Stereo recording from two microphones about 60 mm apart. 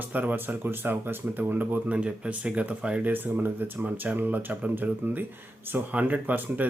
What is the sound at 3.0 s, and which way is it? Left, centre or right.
Speech, right.